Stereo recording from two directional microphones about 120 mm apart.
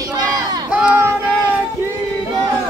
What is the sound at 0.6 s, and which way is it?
Crowd, 10° right (ahead or behind).